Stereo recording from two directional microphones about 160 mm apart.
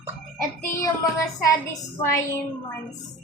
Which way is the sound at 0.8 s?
20° left (ahead or behind).